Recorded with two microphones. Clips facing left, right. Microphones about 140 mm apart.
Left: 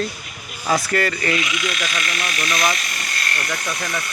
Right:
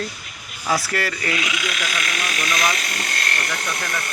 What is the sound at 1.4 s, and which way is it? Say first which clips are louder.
Speech: left 2 dB; 90° right.